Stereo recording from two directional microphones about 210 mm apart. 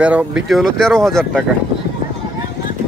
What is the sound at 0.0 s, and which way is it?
Speech, 5° right (ahead or behind).